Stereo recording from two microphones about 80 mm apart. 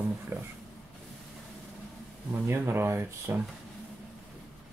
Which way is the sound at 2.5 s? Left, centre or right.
Right.